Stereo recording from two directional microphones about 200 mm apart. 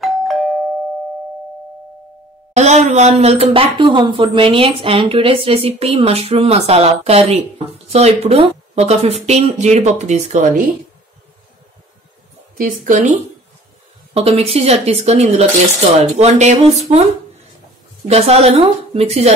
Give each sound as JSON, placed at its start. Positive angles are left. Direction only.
{"t": 0.0, "sound": "doorbell", "side_deg": 0}
{"t": 2.5, "sound": "speech", "side_deg": -35}
{"t": 12.5, "sound": "speech", "side_deg": -40}
{"t": 14.1, "sound": "speech", "side_deg": -30}